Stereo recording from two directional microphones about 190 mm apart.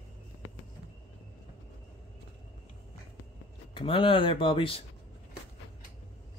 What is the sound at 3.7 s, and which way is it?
Speech, 25° left (ahead or behind).